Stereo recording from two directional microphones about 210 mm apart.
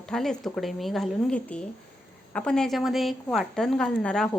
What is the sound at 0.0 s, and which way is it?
A woman's voice, 5° left (ahead or behind).